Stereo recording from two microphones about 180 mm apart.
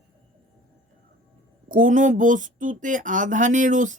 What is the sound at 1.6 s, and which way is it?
Speech, 45° right (ahead or behind).